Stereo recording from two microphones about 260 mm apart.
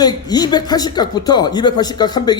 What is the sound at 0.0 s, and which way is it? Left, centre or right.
A man's voice, centre.